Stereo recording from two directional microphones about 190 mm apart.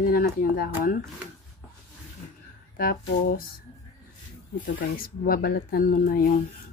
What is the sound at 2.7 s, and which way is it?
Speech, 50° left (ahead or behind).